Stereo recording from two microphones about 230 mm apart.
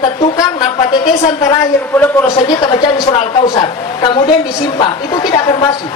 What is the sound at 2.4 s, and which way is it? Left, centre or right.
A woman's voice, centre.